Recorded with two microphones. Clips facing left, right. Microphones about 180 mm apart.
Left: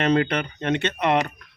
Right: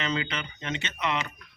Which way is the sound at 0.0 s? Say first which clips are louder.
Left 10 dB; 60° left (ahead or behind).